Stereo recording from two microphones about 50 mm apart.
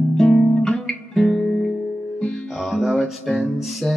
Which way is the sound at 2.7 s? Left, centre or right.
Centre.